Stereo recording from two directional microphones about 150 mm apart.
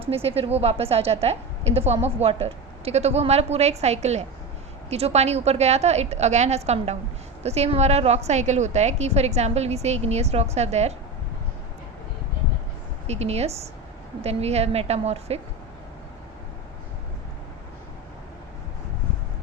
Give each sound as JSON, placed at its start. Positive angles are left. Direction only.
{"t": 0.1, "sound": "a woman's voice", "side_deg": -40}
{"t": 13.1, "sound": "a woman's voice", "side_deg": -45}